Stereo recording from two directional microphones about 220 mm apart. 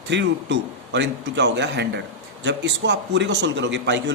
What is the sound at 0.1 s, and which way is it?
A man's voice, 55° right (ahead or behind).